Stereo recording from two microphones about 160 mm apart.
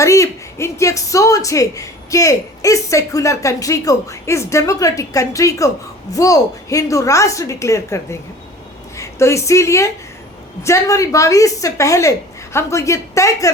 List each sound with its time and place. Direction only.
0.0 s a woman's voice: 20° left (ahead or behind)